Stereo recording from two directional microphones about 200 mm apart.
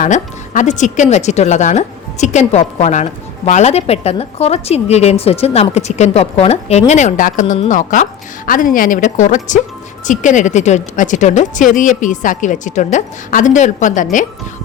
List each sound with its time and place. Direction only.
0.0 s speech: 40° left (ahead or behind)